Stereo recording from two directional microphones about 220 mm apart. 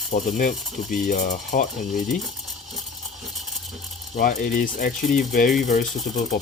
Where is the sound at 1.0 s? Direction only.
35° left (ahead or behind).